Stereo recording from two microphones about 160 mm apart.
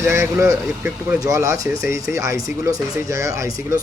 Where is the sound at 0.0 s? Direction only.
15° right (ahead or behind).